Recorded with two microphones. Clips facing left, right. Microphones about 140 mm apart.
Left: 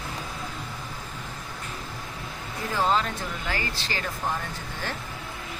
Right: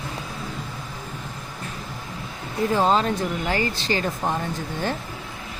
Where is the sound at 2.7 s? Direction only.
25° right (ahead or behind).